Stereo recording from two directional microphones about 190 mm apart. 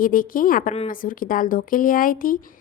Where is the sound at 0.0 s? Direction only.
45° left (ahead or behind).